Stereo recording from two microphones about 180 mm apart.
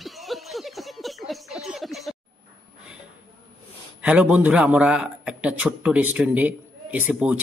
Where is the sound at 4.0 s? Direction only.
5° right (ahead or behind).